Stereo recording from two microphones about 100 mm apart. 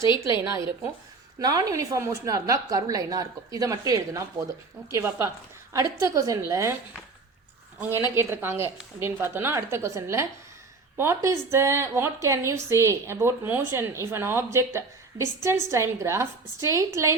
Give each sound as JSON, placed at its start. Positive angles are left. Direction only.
{"t": 1.4, "sound": "a woman's voice", "side_deg": -40}
{"t": 8.1, "sound": "speech", "side_deg": -25}